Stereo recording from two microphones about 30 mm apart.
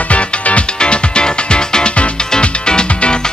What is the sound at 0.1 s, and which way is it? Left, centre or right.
Music, left.